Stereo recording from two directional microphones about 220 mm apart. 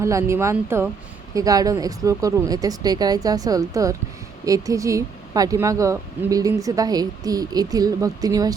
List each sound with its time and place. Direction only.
0.0 s speech: 15° right (ahead or behind)